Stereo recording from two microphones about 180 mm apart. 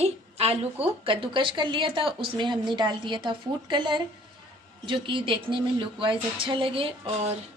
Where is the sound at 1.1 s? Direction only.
30° right (ahead or behind).